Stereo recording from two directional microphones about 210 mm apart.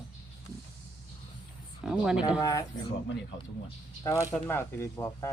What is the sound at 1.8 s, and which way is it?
Speech, 5° right (ahead or behind).